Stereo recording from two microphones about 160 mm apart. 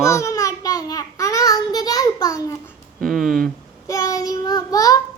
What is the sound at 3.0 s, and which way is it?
Speech, centre (ahead or behind).